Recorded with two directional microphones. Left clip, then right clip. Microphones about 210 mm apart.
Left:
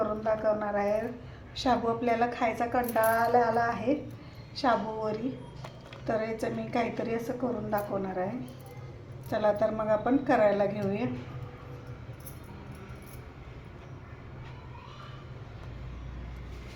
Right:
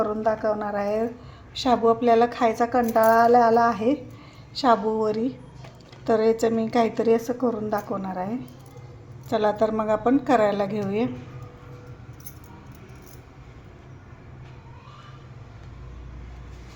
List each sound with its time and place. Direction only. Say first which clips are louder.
0.3 s a woman's voice: right 2 dB; 45° right (ahead or behind)
9.3 s a woman's voice: right 5 dB; 45° right (ahead or behind)